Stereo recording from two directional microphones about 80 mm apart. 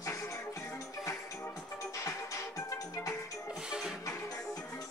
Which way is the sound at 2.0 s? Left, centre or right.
Left.